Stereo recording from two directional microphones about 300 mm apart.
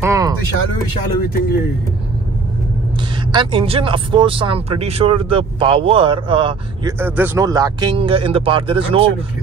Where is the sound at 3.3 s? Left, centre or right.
Centre.